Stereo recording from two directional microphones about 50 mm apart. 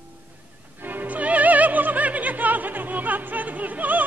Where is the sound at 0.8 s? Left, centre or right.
Right.